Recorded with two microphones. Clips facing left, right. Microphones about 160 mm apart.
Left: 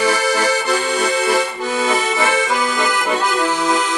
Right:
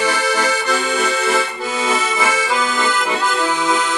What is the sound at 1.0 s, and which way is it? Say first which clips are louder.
Accordion: left 2 dB; 35° left (ahead or behind).